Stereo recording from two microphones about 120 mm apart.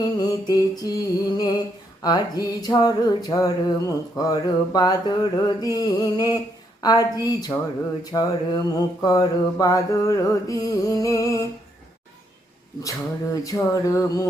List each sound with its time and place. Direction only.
0.5 s a sound: 30° left (ahead or behind)
8.1 s mantra: 35° left (ahead or behind)
12.8 s mantra: 30° left (ahead or behind)